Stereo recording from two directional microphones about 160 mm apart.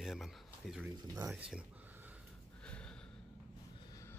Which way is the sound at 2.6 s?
5° left (ahead or behind).